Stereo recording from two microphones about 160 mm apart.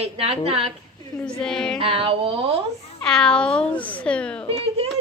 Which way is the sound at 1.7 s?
35° right (ahead or behind).